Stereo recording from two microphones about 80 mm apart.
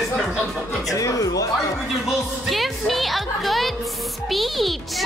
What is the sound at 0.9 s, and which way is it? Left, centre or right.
Speech, left.